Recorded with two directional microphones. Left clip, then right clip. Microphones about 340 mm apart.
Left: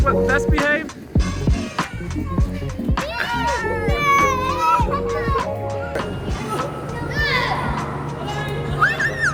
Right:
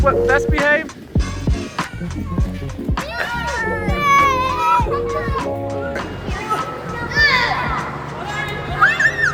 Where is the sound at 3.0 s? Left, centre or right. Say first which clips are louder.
Even; centre.